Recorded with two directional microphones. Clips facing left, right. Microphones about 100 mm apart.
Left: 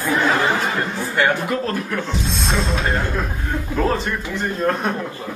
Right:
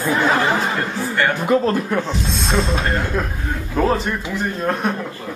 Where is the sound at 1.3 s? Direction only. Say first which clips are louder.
Right 5 dB; 20° right (ahead or behind).